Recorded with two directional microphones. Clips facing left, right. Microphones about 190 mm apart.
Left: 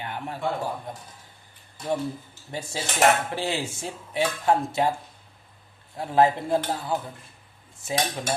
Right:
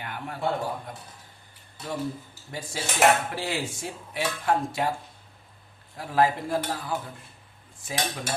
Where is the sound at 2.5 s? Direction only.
25° left (ahead or behind).